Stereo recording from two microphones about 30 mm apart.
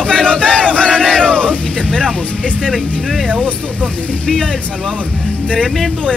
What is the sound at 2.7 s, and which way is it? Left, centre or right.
Speech, centre.